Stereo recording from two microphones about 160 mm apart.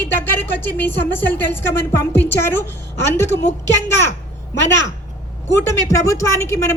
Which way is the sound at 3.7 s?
15° left (ahead or behind).